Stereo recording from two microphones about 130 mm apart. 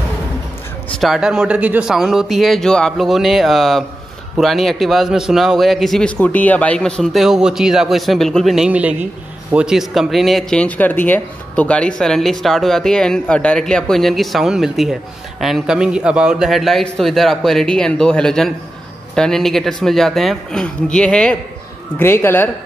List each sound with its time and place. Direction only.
1.0 s a man's voice: 5° right (ahead or behind)
21.9 s speech: 15° left (ahead or behind)